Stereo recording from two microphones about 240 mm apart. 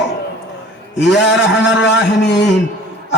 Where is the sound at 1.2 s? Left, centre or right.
Left.